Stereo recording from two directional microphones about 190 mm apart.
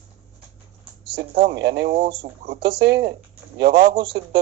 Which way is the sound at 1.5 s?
60° right (ahead or behind).